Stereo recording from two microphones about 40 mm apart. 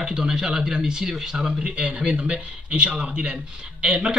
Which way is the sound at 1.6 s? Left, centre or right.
Right.